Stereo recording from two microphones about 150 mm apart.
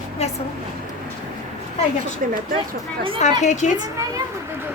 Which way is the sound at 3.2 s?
50° left (ahead or behind).